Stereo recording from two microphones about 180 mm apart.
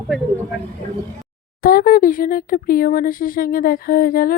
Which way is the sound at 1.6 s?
55° left (ahead or behind).